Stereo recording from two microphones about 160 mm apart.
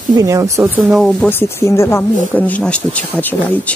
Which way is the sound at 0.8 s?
Centre (ahead or behind).